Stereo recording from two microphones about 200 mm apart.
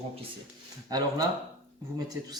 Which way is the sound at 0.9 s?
20° right (ahead or behind).